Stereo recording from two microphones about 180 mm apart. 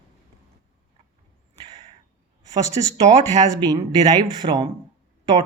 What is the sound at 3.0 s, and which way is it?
Speech, 35° right (ahead or behind).